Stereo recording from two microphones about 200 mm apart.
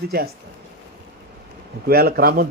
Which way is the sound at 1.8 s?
50° right (ahead or behind).